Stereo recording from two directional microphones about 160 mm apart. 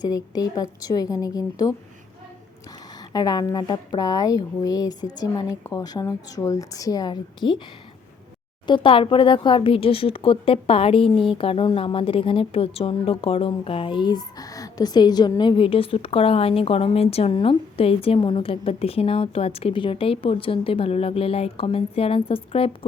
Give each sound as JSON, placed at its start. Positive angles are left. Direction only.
{"t": 0.0, "sound": "a woman's voice", "side_deg": 25}
{"t": 3.0, "sound": "a woman's voice", "side_deg": 25}
{"t": 8.6, "sound": "speech", "side_deg": 30}